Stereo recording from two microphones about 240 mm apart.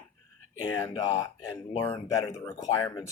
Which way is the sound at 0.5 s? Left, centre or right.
Left.